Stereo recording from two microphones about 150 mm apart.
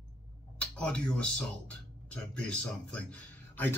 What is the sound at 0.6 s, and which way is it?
Speech, 5° left (ahead or behind).